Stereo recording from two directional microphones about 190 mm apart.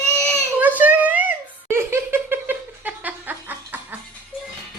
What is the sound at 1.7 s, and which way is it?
Laughter, 10° right (ahead or behind).